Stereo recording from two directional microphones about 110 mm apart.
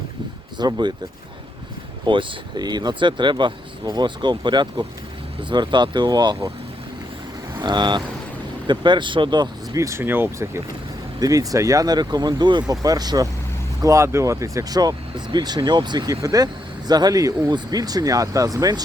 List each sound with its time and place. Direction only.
0.6 s speech: 40° right (ahead or behind)
2.0 s speech: 45° right (ahead or behind)
7.6 s speech: 40° right (ahead or behind)
9.7 s speech: 25° right (ahead or behind)
11.2 s speech: 30° right (ahead or behind)